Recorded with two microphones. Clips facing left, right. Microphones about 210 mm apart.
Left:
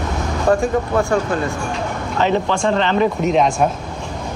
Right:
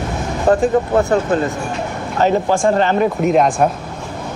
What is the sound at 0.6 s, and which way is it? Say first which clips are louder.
Speech: right 3 dB; 20° right (ahead or behind).